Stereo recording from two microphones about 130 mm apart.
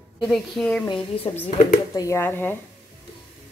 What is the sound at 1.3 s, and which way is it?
Speech, 40° left (ahead or behind).